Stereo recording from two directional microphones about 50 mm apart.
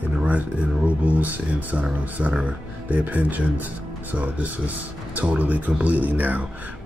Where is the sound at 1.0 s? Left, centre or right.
Right.